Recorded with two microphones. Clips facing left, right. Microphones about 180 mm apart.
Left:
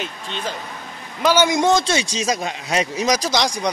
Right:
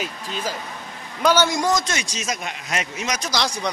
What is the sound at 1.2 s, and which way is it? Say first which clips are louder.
Speech: left 2 dB; 10° left (ahead or behind).